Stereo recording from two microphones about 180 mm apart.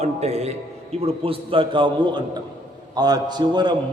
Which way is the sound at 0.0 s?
35° right (ahead or behind).